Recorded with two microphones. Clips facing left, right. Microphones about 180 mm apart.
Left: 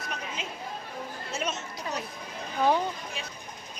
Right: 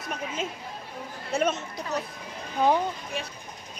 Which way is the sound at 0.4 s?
50° right (ahead or behind).